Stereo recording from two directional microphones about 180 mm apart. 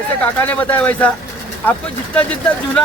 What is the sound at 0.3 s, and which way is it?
Speech, 10° left (ahead or behind).